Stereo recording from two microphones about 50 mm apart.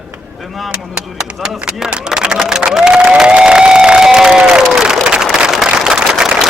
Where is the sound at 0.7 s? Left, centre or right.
Centre.